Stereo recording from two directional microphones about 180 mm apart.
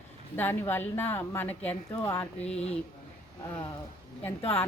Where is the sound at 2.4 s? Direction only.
35° left (ahead or behind).